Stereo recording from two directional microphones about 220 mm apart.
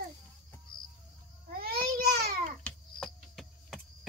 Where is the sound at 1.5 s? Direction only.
45° right (ahead or behind).